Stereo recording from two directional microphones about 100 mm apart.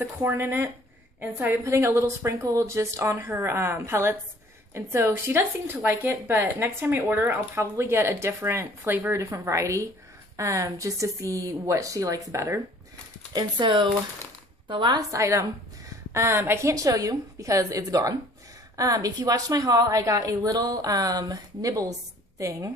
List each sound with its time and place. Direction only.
0.2 s speech: 20° right (ahead or behind)
9.2 s a woman's voice: 30° right (ahead or behind)
13.3 s speech: 50° right (ahead or behind)
15.0 s a woman's voice: 35° right (ahead or behind)